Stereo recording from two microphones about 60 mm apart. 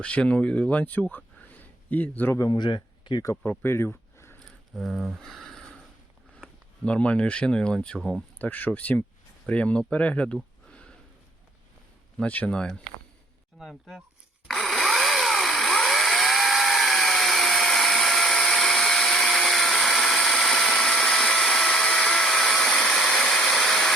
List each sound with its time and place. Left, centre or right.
0.0 s speech: centre
1.1 s a sound: left
3.4 s speech: left
4.7 s speech: centre
6.8 s speech: centre
7.9 s speech: centre
8.4 s speech: left
10.7 s sniff: centre
12.2 s speech: left
13.6 s speech: centre
14.4 s a sound: centre